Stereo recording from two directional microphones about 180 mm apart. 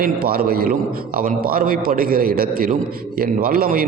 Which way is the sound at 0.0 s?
55° right (ahead or behind).